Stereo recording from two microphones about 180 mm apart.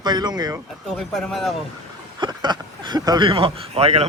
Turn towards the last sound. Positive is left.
turn(degrees=-35)  # may be behind; listen again after turning